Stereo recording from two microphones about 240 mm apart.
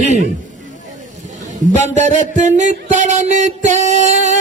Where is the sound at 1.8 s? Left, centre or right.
Right.